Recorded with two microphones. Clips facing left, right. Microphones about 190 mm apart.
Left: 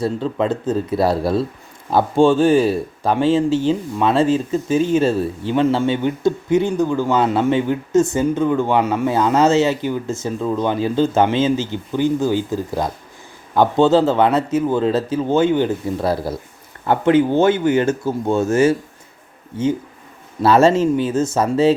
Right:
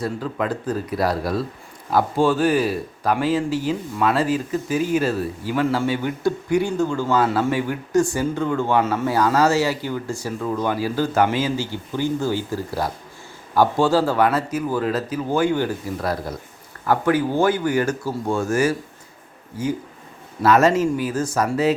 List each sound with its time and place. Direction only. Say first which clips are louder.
0.0 s speech: left 5 dB; 25° left (ahead or behind)
20.4 s speech: left 3 dB; 30° left (ahead or behind)